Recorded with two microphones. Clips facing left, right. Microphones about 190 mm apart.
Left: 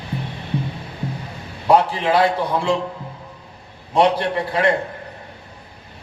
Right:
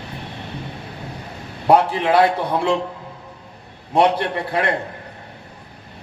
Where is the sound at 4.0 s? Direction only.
55° right (ahead or behind).